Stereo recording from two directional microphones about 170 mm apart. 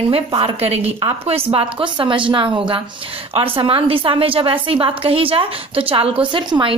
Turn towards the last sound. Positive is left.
turn(degrees=-30)  # may be behind; listen again after turning